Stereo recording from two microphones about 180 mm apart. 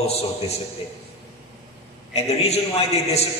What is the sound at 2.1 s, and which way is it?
A man's voice, 35° left (ahead or behind).